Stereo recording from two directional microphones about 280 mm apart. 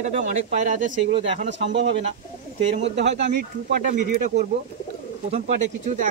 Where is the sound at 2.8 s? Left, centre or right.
Right.